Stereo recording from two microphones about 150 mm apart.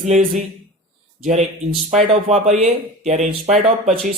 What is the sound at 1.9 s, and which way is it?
A man's voice, 45° right (ahead or behind).